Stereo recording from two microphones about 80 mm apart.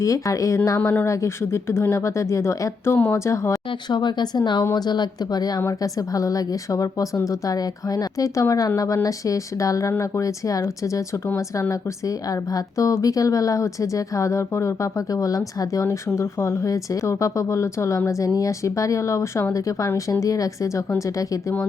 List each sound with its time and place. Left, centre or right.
0.0 s speech: left
3.7 s speech: left